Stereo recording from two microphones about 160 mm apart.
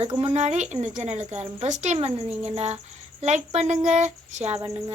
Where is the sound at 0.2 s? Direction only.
40° right (ahead or behind).